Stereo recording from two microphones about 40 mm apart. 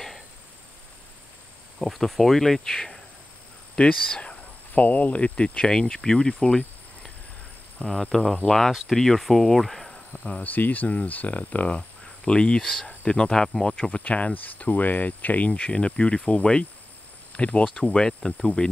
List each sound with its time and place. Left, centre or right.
1.8 s speech: centre
3.8 s speech: left
4.4 s speech: left
5.7 s speech: centre
7.8 s speech: centre
10.4 s speech: left
12.3 s speech: left
13.8 s speech: left
15.7 s speech: left
17.4 s speech: left
17.9 s speech: centre